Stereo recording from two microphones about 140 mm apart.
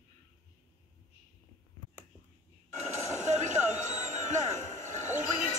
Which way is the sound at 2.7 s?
60° right (ahead or behind).